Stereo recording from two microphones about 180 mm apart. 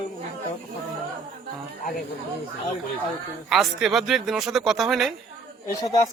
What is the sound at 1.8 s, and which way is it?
Speech, 50° left (ahead or behind).